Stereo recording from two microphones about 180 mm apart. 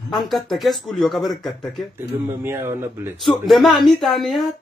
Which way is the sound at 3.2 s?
Centre (ahead or behind).